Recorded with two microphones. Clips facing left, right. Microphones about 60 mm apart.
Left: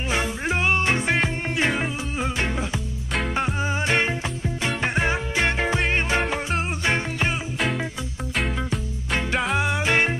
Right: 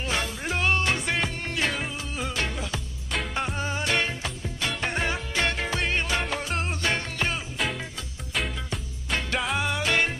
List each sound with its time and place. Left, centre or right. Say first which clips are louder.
0.1 s music: left 5 dB; left
8.4 s music: left 4 dB; centre
9.6 s music: left 3 dB; left